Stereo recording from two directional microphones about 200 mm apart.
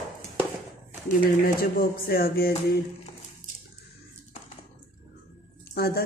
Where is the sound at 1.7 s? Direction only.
50° left (ahead or behind).